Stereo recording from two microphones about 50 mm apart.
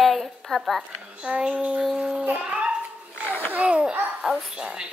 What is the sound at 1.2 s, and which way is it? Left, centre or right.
Child singing, centre.